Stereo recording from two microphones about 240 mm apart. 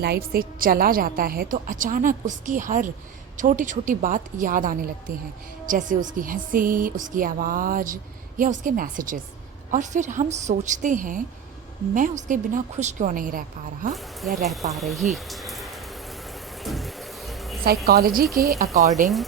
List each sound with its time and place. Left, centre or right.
0.0 s a woman's voice: right
13.9 s speech: centre
16.6 s music: centre
17.8 s a woman's voice: right